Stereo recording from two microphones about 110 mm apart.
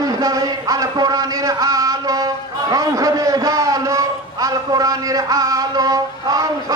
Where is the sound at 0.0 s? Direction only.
35° right (ahead or behind).